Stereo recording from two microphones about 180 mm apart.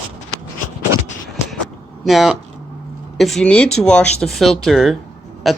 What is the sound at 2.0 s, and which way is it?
Speech, centre (ahead or behind).